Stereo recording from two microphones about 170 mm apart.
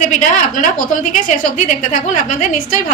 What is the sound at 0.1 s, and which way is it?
A woman's voice, 45° left (ahead or behind).